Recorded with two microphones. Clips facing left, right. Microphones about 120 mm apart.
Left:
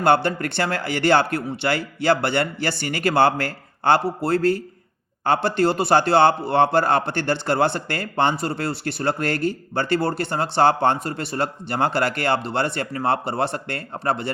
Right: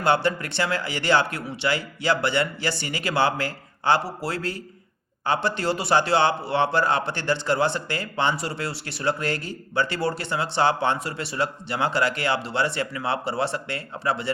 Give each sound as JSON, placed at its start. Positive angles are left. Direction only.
{"t": 0.0, "sound": "a man's voice", "side_deg": 55}